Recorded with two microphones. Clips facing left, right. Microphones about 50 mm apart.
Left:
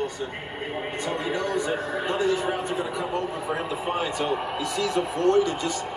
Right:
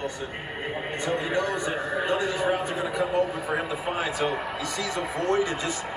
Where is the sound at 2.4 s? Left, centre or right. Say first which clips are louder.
Right 2 dB; centre.